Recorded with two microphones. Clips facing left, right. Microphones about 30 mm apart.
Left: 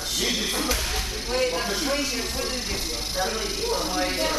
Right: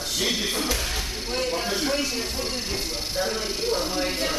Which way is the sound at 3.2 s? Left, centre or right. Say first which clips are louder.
Right 1 dB; right.